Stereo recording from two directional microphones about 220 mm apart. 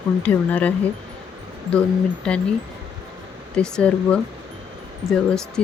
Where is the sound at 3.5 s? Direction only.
5° left (ahead or behind).